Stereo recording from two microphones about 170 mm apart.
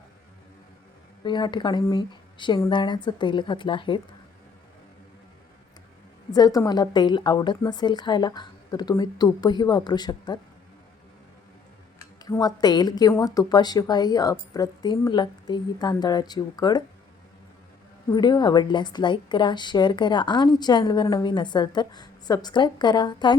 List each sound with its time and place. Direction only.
1.2 s a woman's voice: 25° left (ahead or behind)
6.3 s a woman's voice: 20° left (ahead or behind)
11.9 s a woman's voice: 20° left (ahead or behind)
18.1 s a woman's voice: 25° left (ahead or behind)